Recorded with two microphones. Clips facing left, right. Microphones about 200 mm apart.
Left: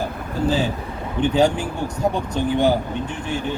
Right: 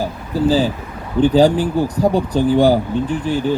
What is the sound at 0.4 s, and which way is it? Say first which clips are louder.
Speech: right 5 dB; 35° right (ahead or behind).